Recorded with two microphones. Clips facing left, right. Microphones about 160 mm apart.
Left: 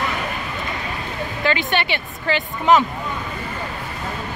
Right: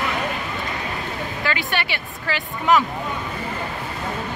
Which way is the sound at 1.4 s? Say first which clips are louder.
Left 5 dB; 20° left (ahead or behind).